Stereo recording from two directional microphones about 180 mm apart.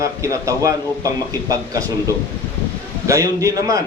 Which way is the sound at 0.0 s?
15° right (ahead or behind).